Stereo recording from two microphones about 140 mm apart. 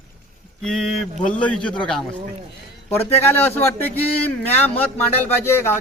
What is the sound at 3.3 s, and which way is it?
Speech, 15° left (ahead or behind).